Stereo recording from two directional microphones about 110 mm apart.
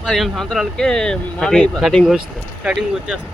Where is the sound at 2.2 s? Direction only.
10° right (ahead or behind).